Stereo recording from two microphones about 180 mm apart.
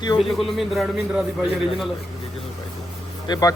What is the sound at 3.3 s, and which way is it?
Speech, 20° left (ahead or behind).